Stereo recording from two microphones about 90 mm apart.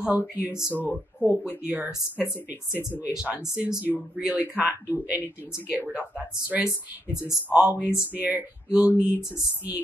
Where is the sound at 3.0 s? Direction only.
15° right (ahead or behind).